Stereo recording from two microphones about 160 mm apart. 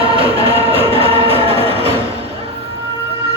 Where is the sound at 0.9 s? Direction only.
35° right (ahead or behind).